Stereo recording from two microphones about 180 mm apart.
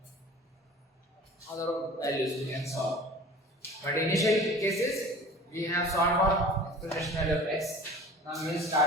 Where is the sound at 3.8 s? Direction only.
15° left (ahead or behind).